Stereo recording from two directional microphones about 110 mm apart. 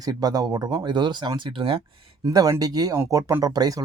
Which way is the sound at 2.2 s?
35° right (ahead or behind).